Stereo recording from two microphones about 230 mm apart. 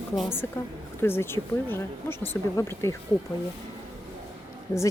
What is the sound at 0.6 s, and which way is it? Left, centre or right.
Speech, centre.